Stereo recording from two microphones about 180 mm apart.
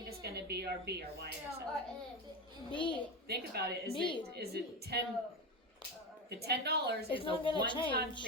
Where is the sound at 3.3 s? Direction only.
65° right (ahead or behind).